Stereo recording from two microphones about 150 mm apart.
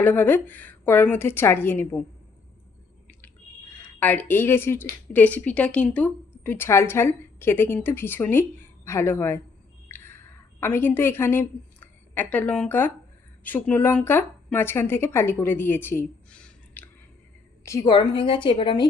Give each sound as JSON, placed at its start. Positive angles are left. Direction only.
{"t": 0.0, "sound": "a woman's voice", "side_deg": 10}
{"t": 3.8, "sound": "a woman's voice", "side_deg": 10}
{"t": 9.9, "sound": "a sound", "side_deg": 15}
{"t": 13.4, "sound": "speech", "side_deg": 10}
{"t": 17.7, "sound": "a woman's voice", "side_deg": 25}